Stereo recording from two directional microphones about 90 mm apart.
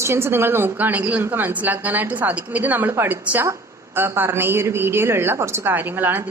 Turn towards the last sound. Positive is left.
turn(degrees=-20)  # may be behind; listen again after turning